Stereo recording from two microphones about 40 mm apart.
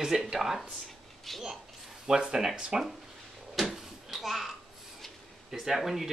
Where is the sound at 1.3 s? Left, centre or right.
Centre.